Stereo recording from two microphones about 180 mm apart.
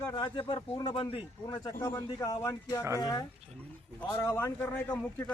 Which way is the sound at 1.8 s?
15° left (ahead or behind).